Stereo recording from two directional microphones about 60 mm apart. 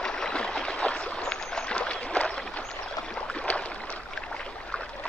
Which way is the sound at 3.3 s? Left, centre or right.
Centre.